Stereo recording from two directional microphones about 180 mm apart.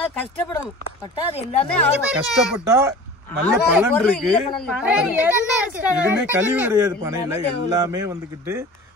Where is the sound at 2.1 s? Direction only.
5° right (ahead or behind).